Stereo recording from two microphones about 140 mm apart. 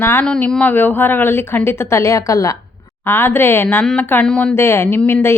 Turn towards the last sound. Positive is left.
turn(degrees=20)  # may be behind; listen again after turning